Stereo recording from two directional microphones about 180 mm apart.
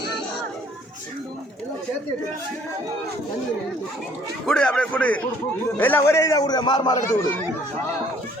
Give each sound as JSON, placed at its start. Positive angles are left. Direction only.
{"t": 4.4, "sound": "a man's voice", "side_deg": 5}